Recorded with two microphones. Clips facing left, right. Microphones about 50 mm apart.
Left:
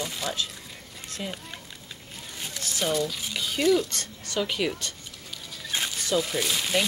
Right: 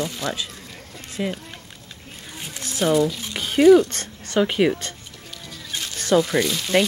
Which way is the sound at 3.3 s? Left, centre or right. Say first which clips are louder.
Right 8 dB; right.